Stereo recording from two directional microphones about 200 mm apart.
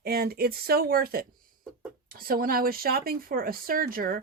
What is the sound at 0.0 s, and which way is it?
Speech, 50° right (ahead or behind).